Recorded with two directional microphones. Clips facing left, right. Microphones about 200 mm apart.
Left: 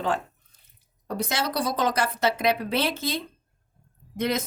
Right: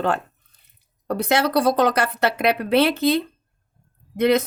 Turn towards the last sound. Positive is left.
turn(degrees=-60)  # may be behind; listen again after turning